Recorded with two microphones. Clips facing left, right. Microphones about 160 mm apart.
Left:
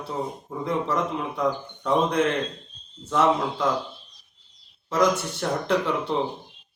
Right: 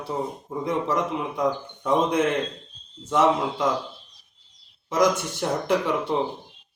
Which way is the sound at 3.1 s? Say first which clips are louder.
Right 1 dB; 15° right (ahead or behind).